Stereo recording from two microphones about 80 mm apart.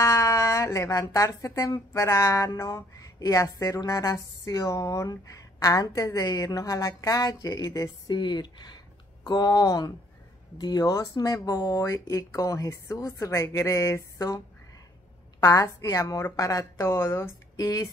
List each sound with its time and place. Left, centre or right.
0.0 s speech: left
8.1 s speech: left
15.4 s speech: left
17.6 s speech: left